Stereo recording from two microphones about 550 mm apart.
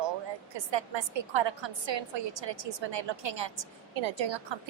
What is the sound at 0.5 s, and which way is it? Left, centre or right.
A woman's voice, right.